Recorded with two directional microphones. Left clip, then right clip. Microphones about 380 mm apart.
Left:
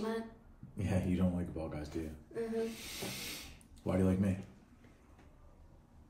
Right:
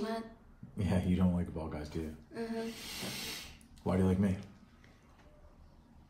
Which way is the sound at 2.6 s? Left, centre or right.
Centre.